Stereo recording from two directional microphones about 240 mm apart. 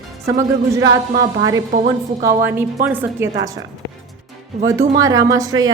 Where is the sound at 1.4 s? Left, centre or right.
Centre.